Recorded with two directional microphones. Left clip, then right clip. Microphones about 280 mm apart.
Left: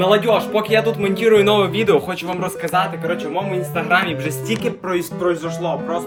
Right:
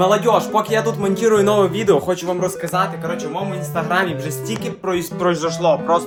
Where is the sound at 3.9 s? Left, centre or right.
Centre.